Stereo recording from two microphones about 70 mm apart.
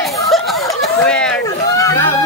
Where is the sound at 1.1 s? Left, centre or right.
Centre.